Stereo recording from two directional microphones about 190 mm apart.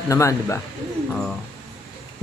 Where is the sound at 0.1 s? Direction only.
15° left (ahead or behind).